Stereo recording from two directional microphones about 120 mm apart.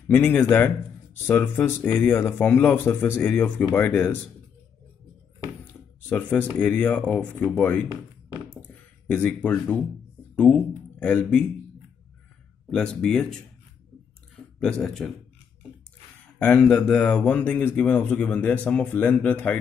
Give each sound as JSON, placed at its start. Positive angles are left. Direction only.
{"t": 0.1, "sound": "speech", "side_deg": 15}
{"t": 6.0, "sound": "speech", "side_deg": 15}
{"t": 9.0, "sound": "speech", "side_deg": 10}
{"t": 12.7, "sound": "speech", "side_deg": 5}
{"t": 14.6, "sound": "speech", "side_deg": 5}
{"t": 16.3, "sound": "speech", "side_deg": 10}